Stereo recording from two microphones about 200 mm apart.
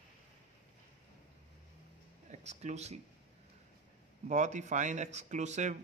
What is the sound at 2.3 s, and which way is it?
Speech, 35° right (ahead or behind).